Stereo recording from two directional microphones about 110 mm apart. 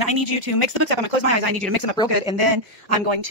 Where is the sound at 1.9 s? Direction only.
40° left (ahead or behind).